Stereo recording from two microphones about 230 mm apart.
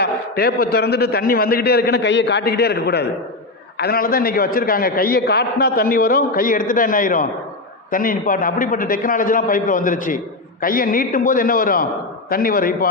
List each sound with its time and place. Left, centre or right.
0.0 s a man's voice: left